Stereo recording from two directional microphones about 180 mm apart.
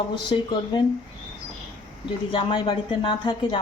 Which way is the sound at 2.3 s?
25° left (ahead or behind).